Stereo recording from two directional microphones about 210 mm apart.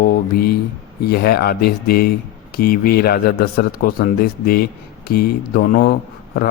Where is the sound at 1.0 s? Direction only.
45° left (ahead or behind).